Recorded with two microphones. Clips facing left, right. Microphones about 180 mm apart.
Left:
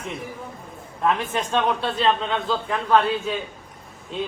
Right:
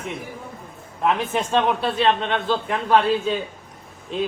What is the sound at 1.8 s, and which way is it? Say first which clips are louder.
A man's voice: right 2 dB; 25° right (ahead or behind).